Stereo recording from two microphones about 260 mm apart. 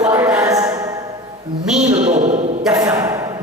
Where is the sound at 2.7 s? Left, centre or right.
Centre.